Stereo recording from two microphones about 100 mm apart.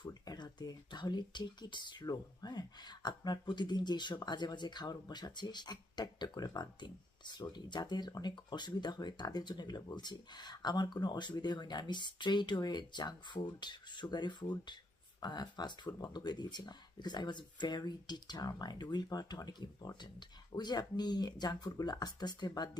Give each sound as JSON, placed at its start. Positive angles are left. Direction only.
{"t": 0.0, "sound": "speech", "side_deg": 45}